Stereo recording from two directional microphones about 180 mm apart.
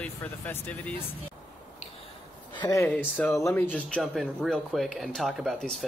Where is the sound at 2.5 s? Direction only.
15° left (ahead or behind).